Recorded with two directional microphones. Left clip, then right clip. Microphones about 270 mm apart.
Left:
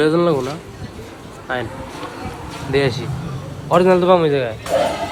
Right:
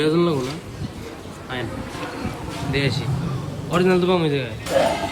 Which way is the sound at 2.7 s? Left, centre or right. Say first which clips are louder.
Left 6 dB; centre.